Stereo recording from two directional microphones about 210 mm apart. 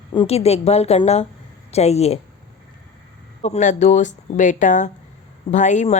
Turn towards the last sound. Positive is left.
turn(degrees=35)  # may be behind; listen again after turning